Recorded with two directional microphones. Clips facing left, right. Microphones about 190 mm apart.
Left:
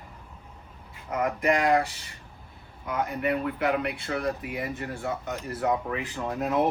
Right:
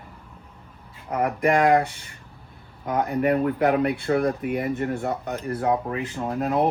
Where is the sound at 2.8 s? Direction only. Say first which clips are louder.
Right 6 dB; 40° right (ahead or behind); by 5.6 s 55° right (ahead or behind).